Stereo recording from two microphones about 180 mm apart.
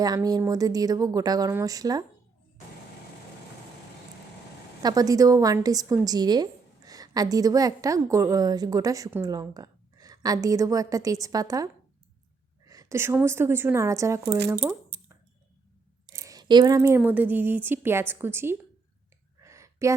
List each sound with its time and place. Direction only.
0.0 s a woman's voice: 20° right (ahead or behind)
4.8 s a woman's voice: 20° right (ahead or behind)
16.1 s speech: 20° right (ahead or behind)
19.4 s a sound: 15° right (ahead or behind)